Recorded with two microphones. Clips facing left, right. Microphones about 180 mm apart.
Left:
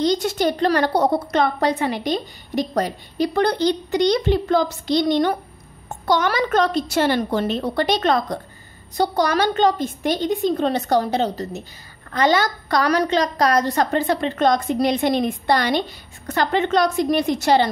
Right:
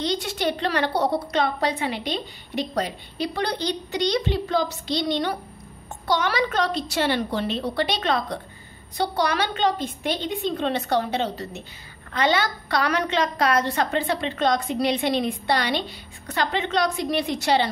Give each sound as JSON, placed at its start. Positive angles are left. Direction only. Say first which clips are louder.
{"t": 0.0, "sound": "a woman's voice", "louder": "left 6 dB", "side_deg": 45}